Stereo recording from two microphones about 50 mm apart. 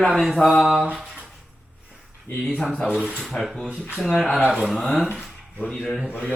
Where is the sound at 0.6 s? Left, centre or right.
Centre.